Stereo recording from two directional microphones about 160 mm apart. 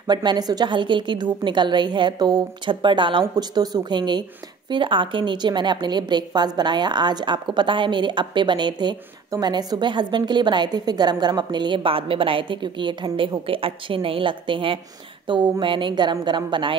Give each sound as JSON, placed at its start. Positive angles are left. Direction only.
{"t": 0.0, "sound": "a woman's voice", "side_deg": -25}